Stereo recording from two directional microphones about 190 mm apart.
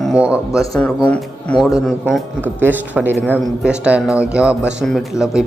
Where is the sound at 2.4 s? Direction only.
10° right (ahead or behind).